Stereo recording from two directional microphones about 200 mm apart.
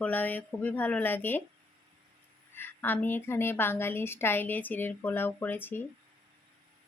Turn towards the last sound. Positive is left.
turn(degrees=10)  # may be behind; listen again after turning